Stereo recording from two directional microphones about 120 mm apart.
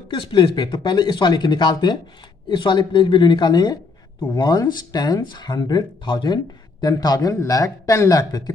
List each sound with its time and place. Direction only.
0.1 s speech: 40° left (ahead or behind)